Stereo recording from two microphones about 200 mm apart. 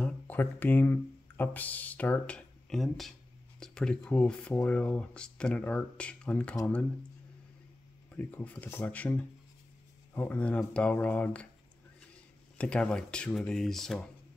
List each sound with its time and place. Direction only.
0.0 s speech: 10° left (ahead or behind)
8.2 s speech: 10° left (ahead or behind)
12.5 s speech: 5° left (ahead or behind)